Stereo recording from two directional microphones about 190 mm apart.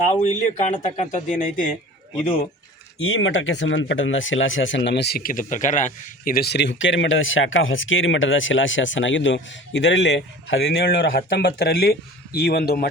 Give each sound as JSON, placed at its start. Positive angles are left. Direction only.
{"t": 0.1, "sound": "speech", "side_deg": 40}
{"t": 3.0, "sound": "speech", "side_deg": 90}
{"t": 11.1, "sound": "speech", "side_deg": 55}